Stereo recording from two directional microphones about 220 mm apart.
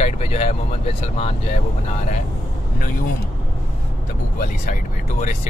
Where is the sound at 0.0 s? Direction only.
30° left (ahead or behind).